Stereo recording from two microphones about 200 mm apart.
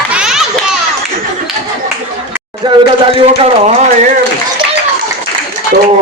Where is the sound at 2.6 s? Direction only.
25° right (ahead or behind).